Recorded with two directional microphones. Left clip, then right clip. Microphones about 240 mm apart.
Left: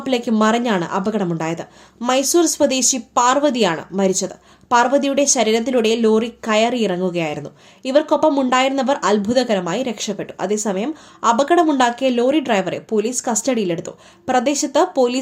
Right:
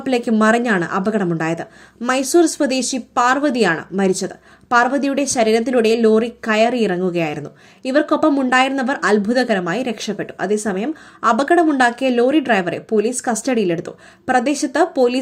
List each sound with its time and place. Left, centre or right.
0.0 s speech: centre